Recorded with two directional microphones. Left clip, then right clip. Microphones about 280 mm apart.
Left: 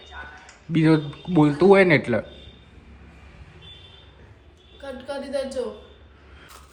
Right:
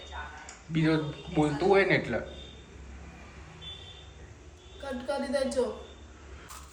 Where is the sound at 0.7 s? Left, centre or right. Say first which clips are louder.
Left 8 dB; left.